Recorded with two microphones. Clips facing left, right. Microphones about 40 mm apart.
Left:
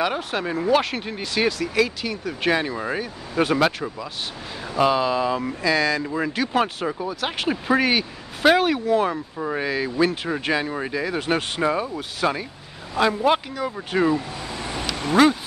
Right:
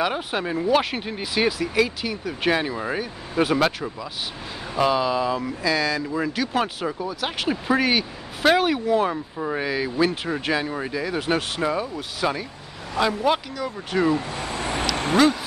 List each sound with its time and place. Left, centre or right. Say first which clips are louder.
0.0 s speech: even; centre
14.3 s vehicle: right 3 dB; right
15.2 s speech: left 2 dB; centre